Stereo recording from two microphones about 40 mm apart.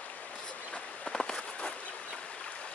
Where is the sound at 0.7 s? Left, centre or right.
Left.